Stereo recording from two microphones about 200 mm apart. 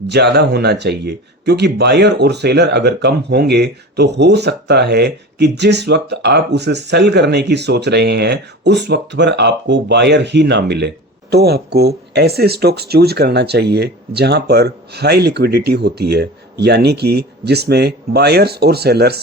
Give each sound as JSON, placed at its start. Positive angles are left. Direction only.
{"t": 0.1, "sound": "speech", "side_deg": -55}